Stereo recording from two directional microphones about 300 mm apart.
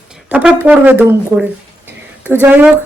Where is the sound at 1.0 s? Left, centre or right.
Centre.